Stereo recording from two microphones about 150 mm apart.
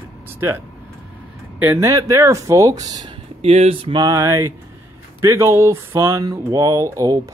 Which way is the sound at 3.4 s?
40° right (ahead or behind).